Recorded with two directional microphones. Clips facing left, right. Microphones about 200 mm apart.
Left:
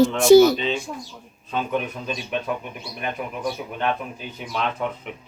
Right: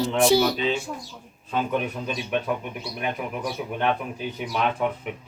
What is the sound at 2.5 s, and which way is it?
Speech, centre (ahead or behind).